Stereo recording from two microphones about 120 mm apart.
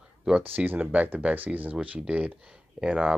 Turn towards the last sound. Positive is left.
turn(degrees=-10)  # may be behind; listen again after turning